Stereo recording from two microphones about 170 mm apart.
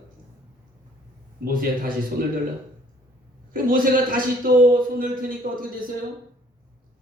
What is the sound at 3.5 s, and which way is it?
A man's voice, 55° right (ahead or behind).